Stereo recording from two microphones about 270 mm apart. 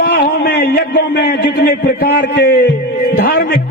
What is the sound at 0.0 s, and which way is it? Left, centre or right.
A man's voice, left.